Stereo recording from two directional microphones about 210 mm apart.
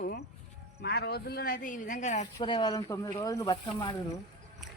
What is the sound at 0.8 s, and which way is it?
Speech, 50° left (ahead or behind).